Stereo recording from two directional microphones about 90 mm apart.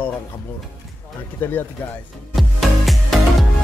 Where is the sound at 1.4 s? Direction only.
20° left (ahead or behind).